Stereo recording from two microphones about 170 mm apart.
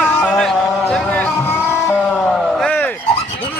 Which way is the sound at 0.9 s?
5° left (ahead or behind).